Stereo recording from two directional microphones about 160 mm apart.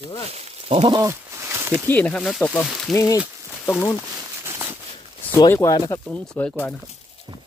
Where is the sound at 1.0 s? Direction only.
20° right (ahead or behind).